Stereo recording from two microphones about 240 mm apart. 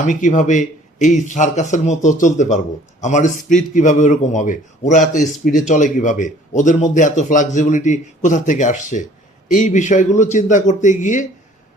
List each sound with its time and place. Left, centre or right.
0.0 s a man's voice: left